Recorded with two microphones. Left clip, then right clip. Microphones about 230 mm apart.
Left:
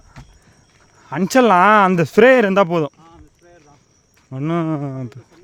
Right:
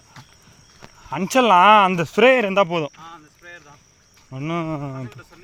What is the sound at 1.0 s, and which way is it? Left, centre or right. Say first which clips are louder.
Speech: left 3 dB; left.